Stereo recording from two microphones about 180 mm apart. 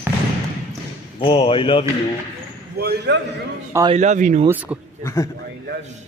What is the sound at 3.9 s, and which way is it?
Speech, 40° right (ahead or behind).